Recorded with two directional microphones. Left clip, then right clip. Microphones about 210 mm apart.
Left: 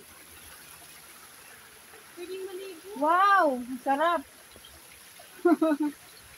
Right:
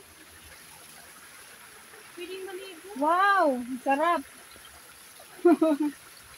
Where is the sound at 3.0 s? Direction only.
25° right (ahead or behind).